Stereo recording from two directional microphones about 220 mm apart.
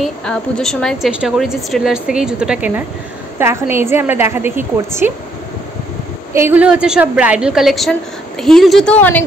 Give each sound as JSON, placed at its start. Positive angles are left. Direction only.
{"t": 0.0, "sound": "a woman's voice", "side_deg": 5}
{"t": 6.3, "sound": "a woman's voice", "side_deg": -10}